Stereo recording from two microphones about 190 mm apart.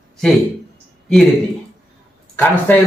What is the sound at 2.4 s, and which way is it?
Speech, 10° left (ahead or behind).